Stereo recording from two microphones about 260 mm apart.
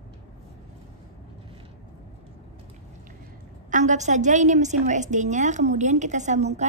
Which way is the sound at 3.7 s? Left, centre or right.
Right.